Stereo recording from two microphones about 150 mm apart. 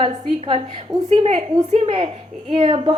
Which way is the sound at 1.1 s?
45° right (ahead or behind).